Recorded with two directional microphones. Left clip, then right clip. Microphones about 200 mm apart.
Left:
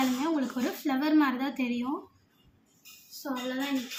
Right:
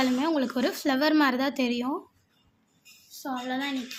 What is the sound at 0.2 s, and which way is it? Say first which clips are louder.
Speech: right 4 dB; 60° right (ahead or behind).